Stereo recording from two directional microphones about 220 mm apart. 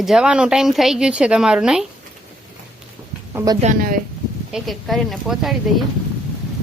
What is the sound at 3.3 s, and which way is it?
Speech, 15° right (ahead or behind).